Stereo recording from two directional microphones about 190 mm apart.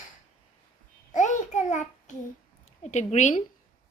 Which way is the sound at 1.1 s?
40° left (ahead or behind).